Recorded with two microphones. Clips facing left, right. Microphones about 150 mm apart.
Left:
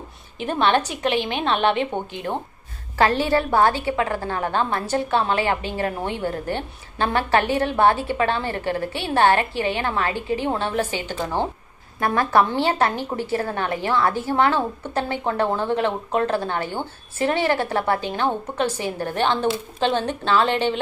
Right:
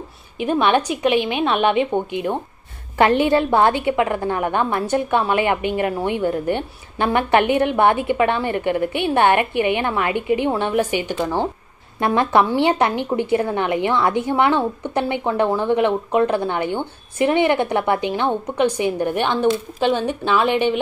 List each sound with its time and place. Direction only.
0.4 s a woman's voice: 10° right (ahead or behind)
12.0 s a woman's voice: 20° right (ahead or behind)